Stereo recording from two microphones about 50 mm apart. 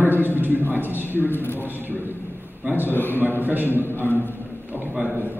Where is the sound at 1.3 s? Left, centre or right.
Left.